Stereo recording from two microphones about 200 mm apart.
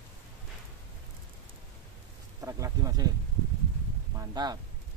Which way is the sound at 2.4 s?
15° right (ahead or behind).